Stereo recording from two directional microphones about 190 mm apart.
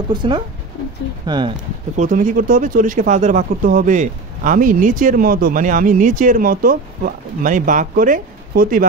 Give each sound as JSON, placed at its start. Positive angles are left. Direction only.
{"t": 0.1, "sound": "speech", "side_deg": -25}
{"t": 2.0, "sound": "speech", "side_deg": -45}